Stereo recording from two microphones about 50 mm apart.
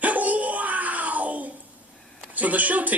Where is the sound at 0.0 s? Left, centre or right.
Right.